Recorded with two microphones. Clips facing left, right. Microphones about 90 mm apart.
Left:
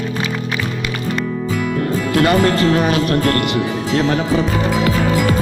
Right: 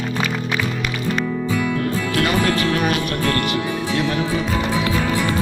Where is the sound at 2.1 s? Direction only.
30° left (ahead or behind).